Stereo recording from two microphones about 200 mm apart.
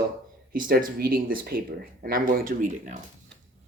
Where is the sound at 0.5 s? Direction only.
45° right (ahead or behind).